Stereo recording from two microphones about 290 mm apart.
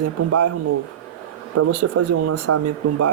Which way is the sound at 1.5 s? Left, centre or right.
Right.